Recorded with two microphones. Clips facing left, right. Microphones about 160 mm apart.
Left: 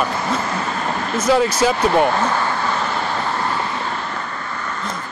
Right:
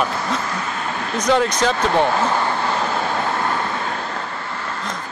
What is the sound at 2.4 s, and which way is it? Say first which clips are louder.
Vehicle: even; 25° right (ahead or behind).